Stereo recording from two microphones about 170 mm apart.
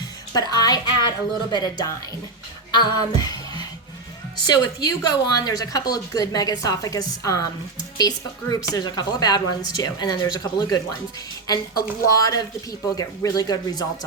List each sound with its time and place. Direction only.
0.3 s speech: 20° left (ahead or behind)
2.7 s music: 25° left (ahead or behind)
4.4 s speech: 25° left (ahead or behind)